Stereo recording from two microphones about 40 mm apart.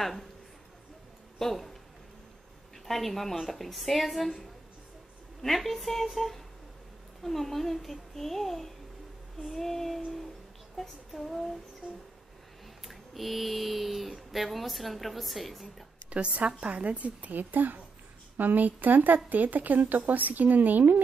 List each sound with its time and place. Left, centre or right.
0.0 s a child's voice: centre
1.4 s speech: centre
2.9 s a child's voice: centre
12.8 s speech: centre
16.1 s a woman's voice: right